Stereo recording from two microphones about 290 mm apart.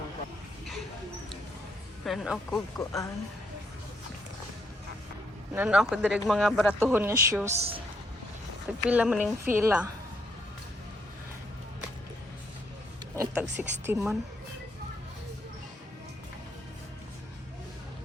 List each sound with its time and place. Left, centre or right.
2.0 s speech: centre
2.7 s speech: centre
5.5 s speech: centre
6.9 s a woman's voice: centre
7.5 s a woman's voice: right
8.9 s a woman's voice: centre
13.1 s a woman's voice: centre